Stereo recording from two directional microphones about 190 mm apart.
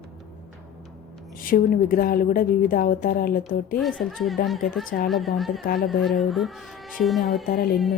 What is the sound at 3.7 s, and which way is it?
Speech, centre (ahead or behind).